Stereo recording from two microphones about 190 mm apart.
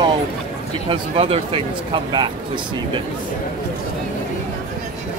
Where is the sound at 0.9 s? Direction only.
30° right (ahead or behind).